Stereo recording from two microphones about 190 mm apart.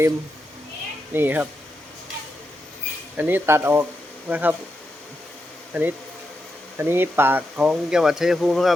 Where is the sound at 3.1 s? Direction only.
10° right (ahead or behind).